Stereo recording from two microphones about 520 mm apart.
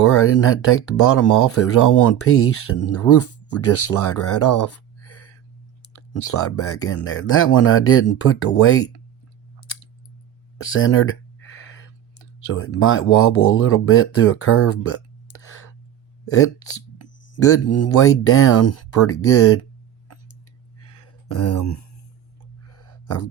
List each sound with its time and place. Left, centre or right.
0.0 s speech: left
10.6 s speech: left
20.7 s a sound: left